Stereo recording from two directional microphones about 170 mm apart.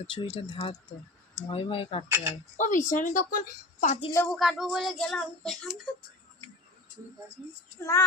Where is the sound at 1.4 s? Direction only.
30° left (ahead or behind).